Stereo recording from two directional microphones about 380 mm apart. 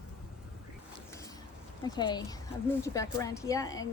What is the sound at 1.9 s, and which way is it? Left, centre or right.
A woman's voice, centre.